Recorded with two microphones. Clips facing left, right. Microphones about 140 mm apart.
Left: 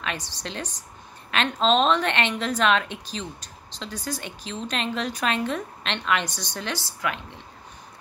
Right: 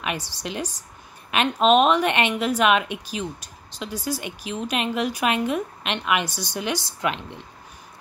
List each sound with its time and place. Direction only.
0.0 s a woman's voice: 10° right (ahead or behind)
7.0 s speech: 25° right (ahead or behind)